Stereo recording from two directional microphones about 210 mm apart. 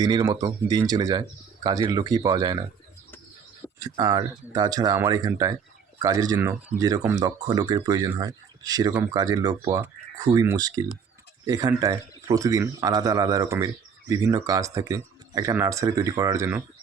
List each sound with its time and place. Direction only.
0.0 s speech: 20° right (ahead or behind)
3.8 s speech: 20° right (ahead or behind)